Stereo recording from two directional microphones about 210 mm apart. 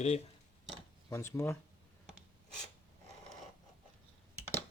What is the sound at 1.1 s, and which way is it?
Speech, 15° left (ahead or behind).